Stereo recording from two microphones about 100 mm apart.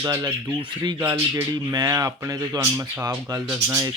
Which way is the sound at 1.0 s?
25° right (ahead or behind).